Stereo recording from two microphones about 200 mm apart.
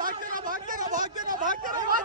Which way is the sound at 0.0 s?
45° right (ahead or behind).